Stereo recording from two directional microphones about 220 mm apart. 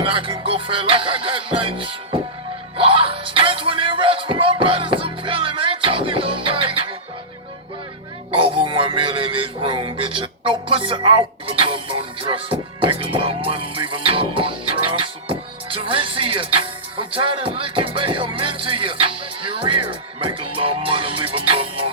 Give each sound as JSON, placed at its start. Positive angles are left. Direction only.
{"t": 0.0, "sound": "music", "side_deg": -25}
{"t": 2.7, "sound": "speech", "side_deg": -25}
{"t": 8.3, "sound": "music", "side_deg": -25}